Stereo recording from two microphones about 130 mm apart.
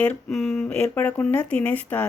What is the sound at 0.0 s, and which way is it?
A woman's voice, 5° left (ahead or behind).